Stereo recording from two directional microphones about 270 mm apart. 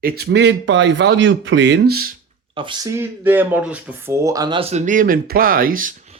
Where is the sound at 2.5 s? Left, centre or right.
Centre.